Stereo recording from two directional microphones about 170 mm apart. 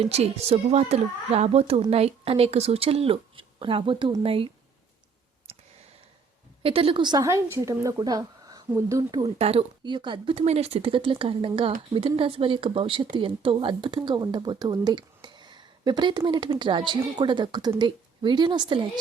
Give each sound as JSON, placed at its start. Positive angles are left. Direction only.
{"t": 0.0, "sound": "speech", "side_deg": -40}
{"t": 6.6, "sound": "speech", "side_deg": -35}
{"t": 9.4, "sound": "speech", "side_deg": -35}